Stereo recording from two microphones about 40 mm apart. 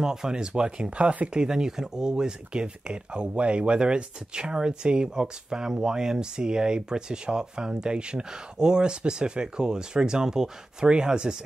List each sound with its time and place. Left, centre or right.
0.0 s speech: centre